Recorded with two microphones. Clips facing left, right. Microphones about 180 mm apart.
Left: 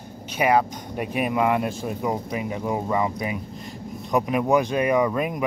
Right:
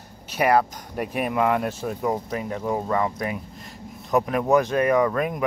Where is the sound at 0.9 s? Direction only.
5° left (ahead or behind).